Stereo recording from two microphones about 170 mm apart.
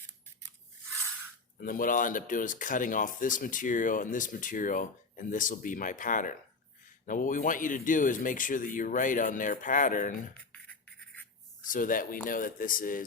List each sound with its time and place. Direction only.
1.6 s speech: 55° left (ahead or behind)
10.5 s a sound: 10° left (ahead or behind)
11.7 s speech: 55° left (ahead or behind)